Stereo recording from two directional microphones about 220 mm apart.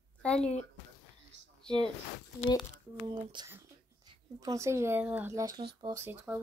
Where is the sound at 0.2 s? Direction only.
5° left (ahead or behind).